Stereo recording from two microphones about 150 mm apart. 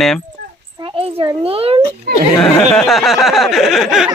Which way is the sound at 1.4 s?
40° right (ahead or behind).